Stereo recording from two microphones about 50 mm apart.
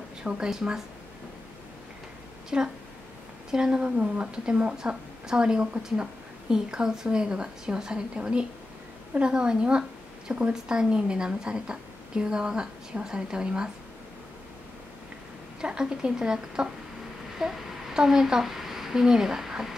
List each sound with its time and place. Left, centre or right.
0.2 s a woman's voice: centre
2.5 s speech: right
4.7 s a woman's voice: centre
15.6 s a woman's voice: centre